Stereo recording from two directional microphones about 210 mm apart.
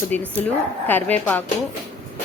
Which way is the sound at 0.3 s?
10° left (ahead or behind).